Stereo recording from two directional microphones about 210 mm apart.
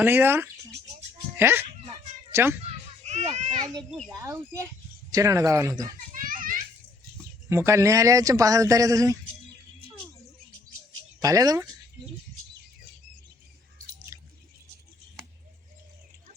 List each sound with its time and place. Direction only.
0.0 s a child's voice: 10° right (ahead or behind)
2.6 s children playing: 35° right (ahead or behind)
3.3 s a child's voice: 35° right (ahead or behind)
4.2 s speech: 15° right (ahead or behind)
6.1 s children playing: 40° right (ahead or behind)
7.5 s speech: 15° right (ahead or behind)
11.2 s speech: 15° right (ahead or behind)
14.1 s drip: 15° right (ahead or behind)